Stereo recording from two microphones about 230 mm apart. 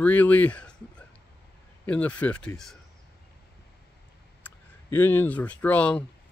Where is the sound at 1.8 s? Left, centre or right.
Centre.